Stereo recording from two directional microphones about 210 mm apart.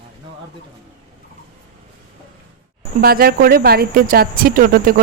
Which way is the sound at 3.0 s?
45° right (ahead or behind).